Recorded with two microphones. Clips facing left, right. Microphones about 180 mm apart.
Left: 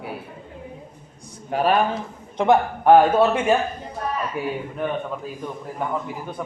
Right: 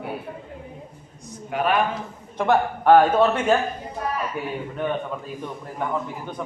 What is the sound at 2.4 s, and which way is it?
A man's voice, 15° left (ahead or behind).